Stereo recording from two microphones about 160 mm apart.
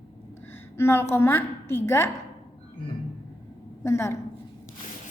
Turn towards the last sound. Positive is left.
turn(degrees=15)  # may be behind; listen again after turning